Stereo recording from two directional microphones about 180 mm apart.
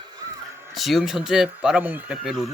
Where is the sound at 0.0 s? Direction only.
20° right (ahead or behind).